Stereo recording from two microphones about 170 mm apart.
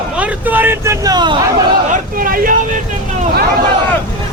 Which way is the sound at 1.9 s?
55° right (ahead or behind).